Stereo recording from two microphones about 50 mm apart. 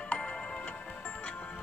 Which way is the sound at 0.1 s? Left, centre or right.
Left.